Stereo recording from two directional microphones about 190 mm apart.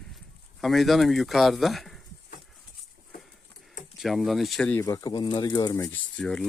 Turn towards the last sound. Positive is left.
turn(degrees=5)  # may be behind; listen again after turning